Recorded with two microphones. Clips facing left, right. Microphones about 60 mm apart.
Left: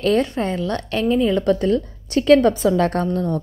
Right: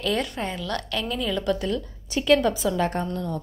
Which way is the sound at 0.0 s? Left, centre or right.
Left.